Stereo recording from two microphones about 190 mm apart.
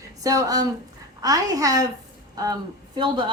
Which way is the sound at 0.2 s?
20° right (ahead or behind).